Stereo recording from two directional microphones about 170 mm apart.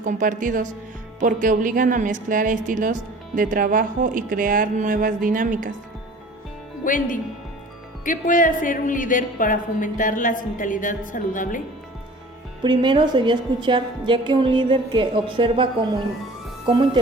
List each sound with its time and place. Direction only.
0.0 s a woman's voice: 50° right (ahead or behind)
6.8 s a woman's voice: 50° left (ahead or behind)
12.6 s a woman's voice: 25° right (ahead or behind)